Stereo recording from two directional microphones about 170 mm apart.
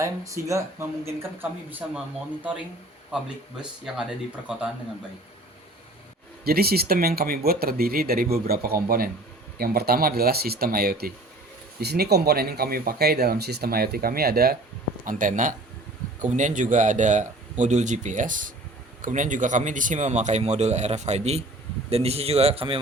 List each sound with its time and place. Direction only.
0.0 s speech: 20° right (ahead or behind)
3.9 s speech: centre (ahead or behind)
6.4 s speech: 65° right (ahead or behind)
15.0 s a man's voice: 50° right (ahead or behind); by 22.8 s 35° right (ahead or behind)